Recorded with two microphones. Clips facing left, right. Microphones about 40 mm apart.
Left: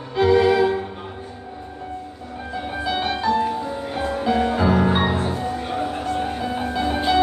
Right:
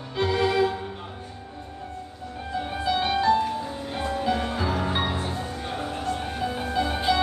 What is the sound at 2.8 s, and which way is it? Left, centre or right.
Music, centre.